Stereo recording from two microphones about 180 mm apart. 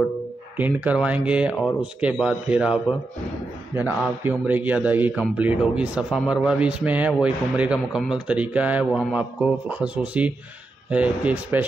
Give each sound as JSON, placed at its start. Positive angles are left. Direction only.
{"t": 0.6, "sound": "a man's voice", "side_deg": -10}